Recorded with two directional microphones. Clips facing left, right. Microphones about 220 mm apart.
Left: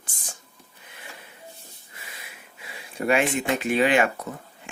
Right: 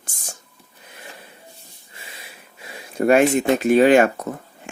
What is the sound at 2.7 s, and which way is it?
Speech, 45° right (ahead or behind).